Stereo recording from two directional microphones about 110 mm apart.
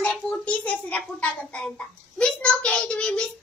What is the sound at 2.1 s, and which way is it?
Child singing, 10° left (ahead or behind).